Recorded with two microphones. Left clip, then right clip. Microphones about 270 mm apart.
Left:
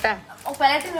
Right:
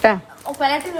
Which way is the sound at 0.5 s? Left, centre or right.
Centre.